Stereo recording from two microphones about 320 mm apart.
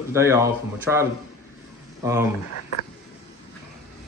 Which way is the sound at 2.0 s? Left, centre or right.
Centre.